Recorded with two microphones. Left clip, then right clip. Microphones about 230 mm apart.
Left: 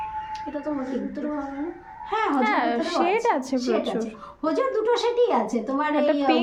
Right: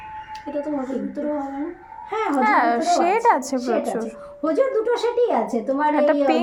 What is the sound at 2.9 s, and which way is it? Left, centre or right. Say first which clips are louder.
Speech: right 1 dB; centre.